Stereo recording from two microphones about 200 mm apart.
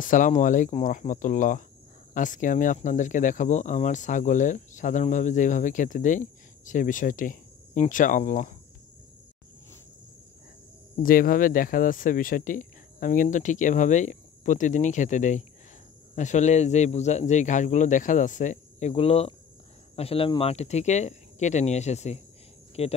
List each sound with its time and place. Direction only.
0.0 s speech: 40° left (ahead or behind)
11.0 s speech: 45° left (ahead or behind)